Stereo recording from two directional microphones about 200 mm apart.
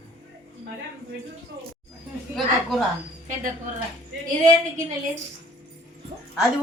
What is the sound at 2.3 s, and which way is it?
Speech, centre (ahead or behind).